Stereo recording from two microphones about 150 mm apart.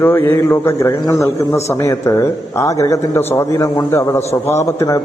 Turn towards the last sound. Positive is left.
turn(degrees=20)  # may be behind; listen again after turning